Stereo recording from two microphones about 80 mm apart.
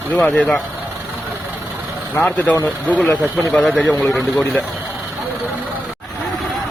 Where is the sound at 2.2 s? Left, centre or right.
Centre.